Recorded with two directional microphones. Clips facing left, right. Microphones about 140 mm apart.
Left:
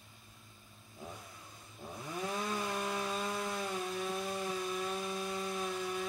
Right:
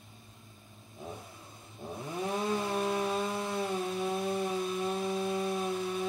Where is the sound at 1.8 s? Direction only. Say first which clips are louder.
Right 4 dB; 25° right (ahead or behind).